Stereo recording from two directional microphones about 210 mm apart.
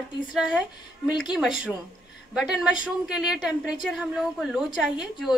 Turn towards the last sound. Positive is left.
turn(degrees=0)  # may be behind; listen again after turning